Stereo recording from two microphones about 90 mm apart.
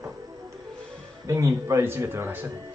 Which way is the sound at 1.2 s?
35° right (ahead or behind).